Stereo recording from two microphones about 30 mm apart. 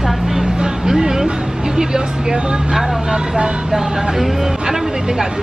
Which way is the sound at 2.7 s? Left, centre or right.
Centre.